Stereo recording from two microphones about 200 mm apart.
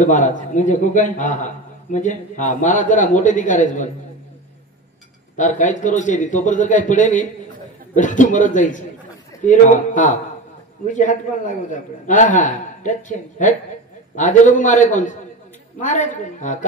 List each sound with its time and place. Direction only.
0.0 s a man's voice: 40° left (ahead or behind)
5.4 s a man's voice: 40° left (ahead or behind)
14.1 s a man's voice: 40° left (ahead or behind)